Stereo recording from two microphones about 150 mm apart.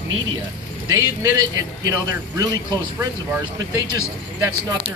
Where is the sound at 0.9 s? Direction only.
20° right (ahead or behind).